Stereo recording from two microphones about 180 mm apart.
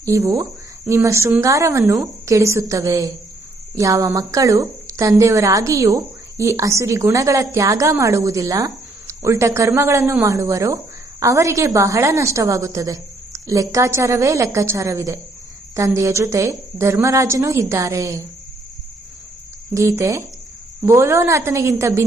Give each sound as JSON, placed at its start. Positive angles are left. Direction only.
{"t": 0.0, "sound": "a woman's voice", "side_deg": -15}
{"t": 19.7, "sound": "a woman's voice", "side_deg": -15}